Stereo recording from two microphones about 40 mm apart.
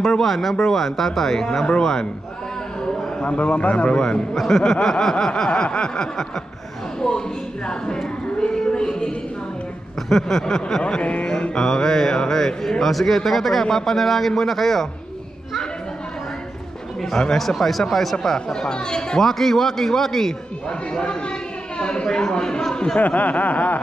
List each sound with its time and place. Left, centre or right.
0.0 s a man's voice: centre
2.8 s a sound: centre
3.3 s a man's voice: left
4.4 s a man's voice: centre
5.5 s a man's voice: left
8.4 s a sound: centre
10.0 s a man's voice: centre
11.0 s music: left
11.5 s a man's voice: centre
17.0 s a man's voice: centre
17.4 s a man's voice: centre
20.6 s a man's voice: left
22.9 s chuckle: left